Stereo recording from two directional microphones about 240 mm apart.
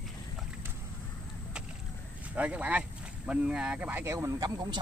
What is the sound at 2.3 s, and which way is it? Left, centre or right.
Speech, centre.